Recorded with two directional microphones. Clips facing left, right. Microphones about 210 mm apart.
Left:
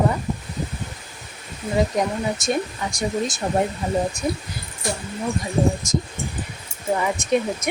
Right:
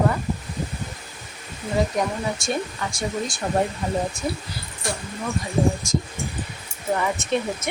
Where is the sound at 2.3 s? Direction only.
20° left (ahead or behind).